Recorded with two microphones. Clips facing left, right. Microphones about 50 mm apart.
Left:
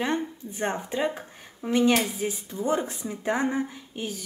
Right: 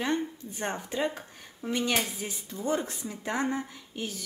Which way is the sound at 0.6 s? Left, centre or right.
Left.